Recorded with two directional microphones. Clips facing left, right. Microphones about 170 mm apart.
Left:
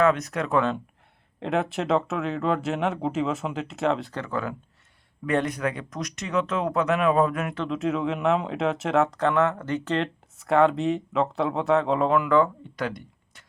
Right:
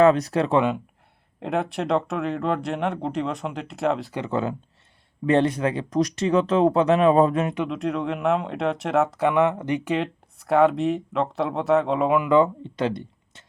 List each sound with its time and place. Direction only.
0.0 s speech: 30° right (ahead or behind)
1.4 s speech: centre (ahead or behind)
4.1 s speech: 20° right (ahead or behind)
7.7 s speech: centre (ahead or behind); by 13.4 s 25° right (ahead or behind)